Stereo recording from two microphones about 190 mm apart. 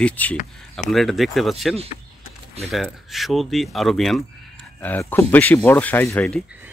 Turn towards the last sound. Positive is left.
turn(degrees=5)  # may be behind; listen again after turning